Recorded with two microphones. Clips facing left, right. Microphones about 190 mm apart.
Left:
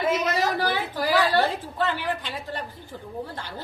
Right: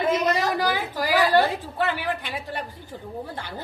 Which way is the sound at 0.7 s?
10° right (ahead or behind).